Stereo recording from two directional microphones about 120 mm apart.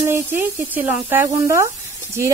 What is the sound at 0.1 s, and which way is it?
Speech, 15° right (ahead or behind).